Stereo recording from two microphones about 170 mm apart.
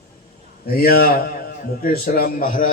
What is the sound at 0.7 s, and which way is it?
A man's voice, 65° left (ahead or behind).